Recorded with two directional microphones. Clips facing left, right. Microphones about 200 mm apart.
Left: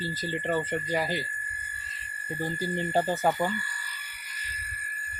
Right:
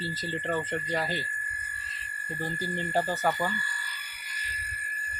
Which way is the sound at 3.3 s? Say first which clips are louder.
Left 3 dB; 10° left (ahead or behind).